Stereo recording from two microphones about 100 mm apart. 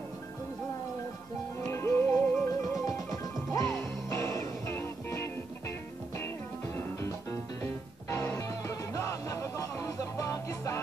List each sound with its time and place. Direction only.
1.7 s music: 25° left (ahead or behind)
2.7 s music: centre (ahead or behind)
3.5 s music: 30° left (ahead or behind)